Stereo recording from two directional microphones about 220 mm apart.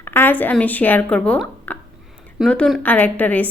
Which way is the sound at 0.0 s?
10° left (ahead or behind).